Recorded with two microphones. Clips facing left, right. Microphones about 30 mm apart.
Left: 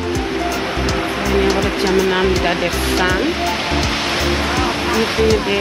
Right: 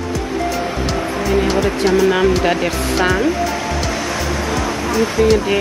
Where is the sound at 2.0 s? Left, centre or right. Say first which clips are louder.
Right 2 dB; left.